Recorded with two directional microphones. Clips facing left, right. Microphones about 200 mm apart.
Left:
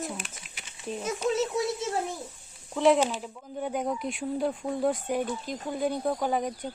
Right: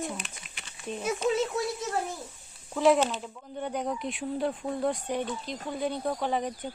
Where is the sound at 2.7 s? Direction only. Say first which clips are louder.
Left 1 dB; centre (ahead or behind).